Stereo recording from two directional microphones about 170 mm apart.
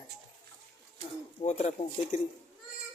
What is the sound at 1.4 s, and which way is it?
Speech, 40° left (ahead or behind).